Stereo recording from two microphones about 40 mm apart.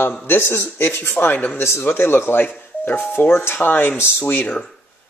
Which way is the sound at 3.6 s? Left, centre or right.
Left.